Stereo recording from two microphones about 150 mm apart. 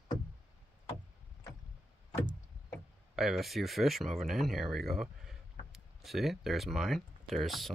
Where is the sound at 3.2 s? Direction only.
Centre (ahead or behind).